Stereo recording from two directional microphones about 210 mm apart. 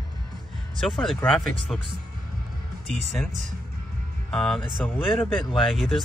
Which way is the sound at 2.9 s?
Centre (ahead or behind).